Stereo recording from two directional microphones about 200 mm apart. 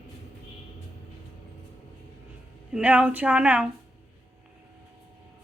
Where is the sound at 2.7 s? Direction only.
5° right (ahead or behind).